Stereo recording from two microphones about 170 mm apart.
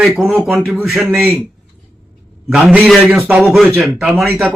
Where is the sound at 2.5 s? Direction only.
5° right (ahead or behind).